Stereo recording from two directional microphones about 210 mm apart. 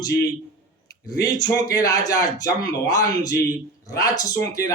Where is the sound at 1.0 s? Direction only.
15° left (ahead or behind).